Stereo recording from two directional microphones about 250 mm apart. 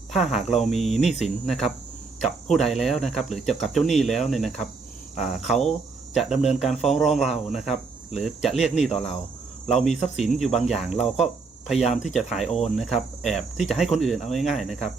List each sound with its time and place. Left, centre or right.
0.1 s speech: centre
6.3 s speech: left
6.6 s speech: centre
11.9 s speech: centre